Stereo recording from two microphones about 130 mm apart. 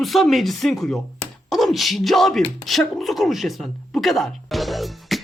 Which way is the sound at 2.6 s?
Centre (ahead or behind).